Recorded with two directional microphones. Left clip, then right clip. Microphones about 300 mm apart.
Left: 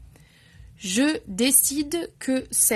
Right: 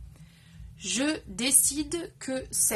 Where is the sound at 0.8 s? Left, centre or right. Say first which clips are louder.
Left 5 dB; left.